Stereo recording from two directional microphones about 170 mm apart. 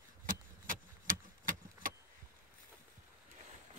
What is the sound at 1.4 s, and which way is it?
Vehicle, 55° right (ahead or behind).